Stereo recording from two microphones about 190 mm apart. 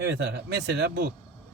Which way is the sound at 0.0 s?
65° right (ahead or behind).